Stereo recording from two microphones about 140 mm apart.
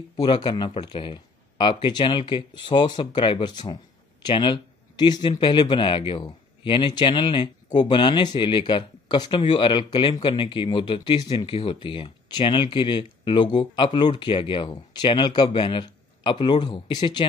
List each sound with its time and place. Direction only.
0.2 s speech: 30° left (ahead or behind)